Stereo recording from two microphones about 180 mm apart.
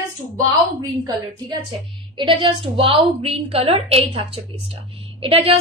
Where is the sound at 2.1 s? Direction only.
30° right (ahead or behind).